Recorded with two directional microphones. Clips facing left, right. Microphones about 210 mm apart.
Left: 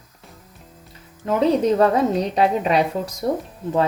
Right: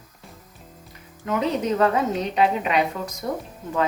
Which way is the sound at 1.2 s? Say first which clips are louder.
Left 6 dB; 35° left (ahead or behind).